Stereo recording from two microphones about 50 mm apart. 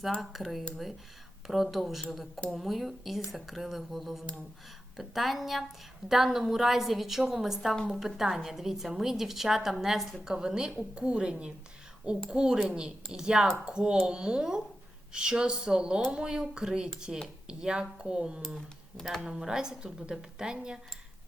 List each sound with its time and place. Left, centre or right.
0.2 s a woman's voice: centre
18.9 s speech: centre
19.2 s a woman's voice: centre